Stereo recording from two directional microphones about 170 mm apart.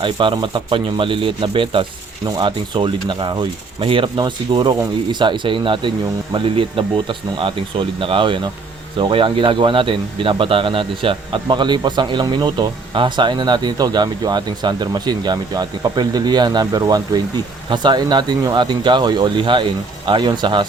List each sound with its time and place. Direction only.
0.0 s a man's voice: 30° right (ahead or behind)